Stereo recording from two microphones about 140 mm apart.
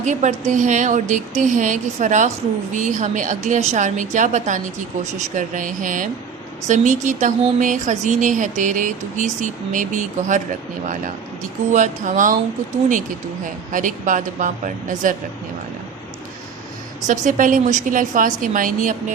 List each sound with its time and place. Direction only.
0.0 s a woman's voice: 60° right (ahead or behind)
13.4 s a woman's voice: 70° right (ahead or behind)
17.1 s a woman's voice: 70° right (ahead or behind)